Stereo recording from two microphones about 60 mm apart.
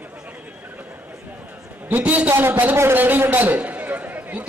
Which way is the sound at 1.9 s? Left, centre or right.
Right.